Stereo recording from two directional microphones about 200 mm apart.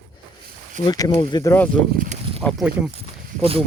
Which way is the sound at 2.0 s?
35° right (ahead or behind).